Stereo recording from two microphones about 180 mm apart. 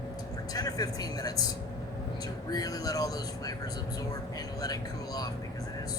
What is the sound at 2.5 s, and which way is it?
Speech, 20° left (ahead or behind).